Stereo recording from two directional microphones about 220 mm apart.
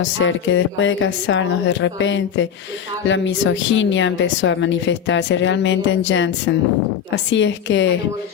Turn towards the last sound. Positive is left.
turn(degrees=55)  # may be behind; listen again after turning